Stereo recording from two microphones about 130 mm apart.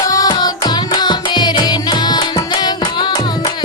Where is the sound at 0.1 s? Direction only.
30° left (ahead or behind).